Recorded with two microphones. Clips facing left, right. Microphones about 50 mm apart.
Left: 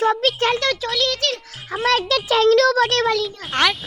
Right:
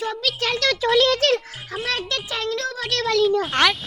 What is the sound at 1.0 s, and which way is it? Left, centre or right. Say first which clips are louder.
Speech: right 4 dB; right.